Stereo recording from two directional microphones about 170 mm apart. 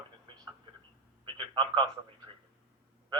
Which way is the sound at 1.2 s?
30° right (ahead or behind).